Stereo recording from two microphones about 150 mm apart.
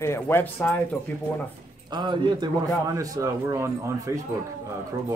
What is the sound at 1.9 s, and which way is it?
A man's voice, 30° right (ahead or behind).